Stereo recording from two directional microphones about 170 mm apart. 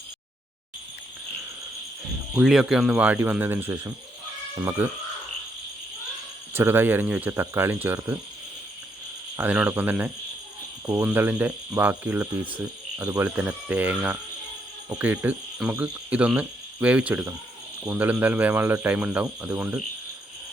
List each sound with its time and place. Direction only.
2.3 s speech: centre (ahead or behind)
6.5 s speech: 15° right (ahead or behind)
9.3 s speech: 10° right (ahead or behind)